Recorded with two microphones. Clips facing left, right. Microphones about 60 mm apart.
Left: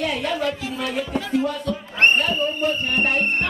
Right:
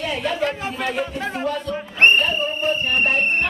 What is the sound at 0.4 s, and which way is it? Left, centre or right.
Speech, right.